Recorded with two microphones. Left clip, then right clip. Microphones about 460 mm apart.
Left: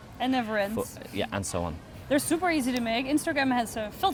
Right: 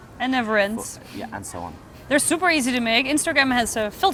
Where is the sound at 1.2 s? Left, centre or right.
Left.